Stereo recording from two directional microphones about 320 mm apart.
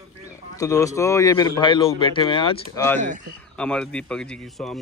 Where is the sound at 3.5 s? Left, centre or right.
Centre.